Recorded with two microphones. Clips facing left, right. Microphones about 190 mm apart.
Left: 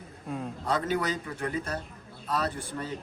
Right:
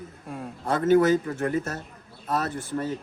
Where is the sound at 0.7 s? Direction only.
50° right (ahead or behind).